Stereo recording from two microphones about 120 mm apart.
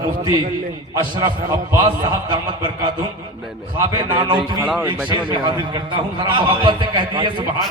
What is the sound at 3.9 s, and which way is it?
Speech, 40° right (ahead or behind).